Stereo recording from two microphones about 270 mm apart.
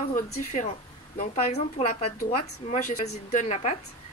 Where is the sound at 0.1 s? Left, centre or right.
Left.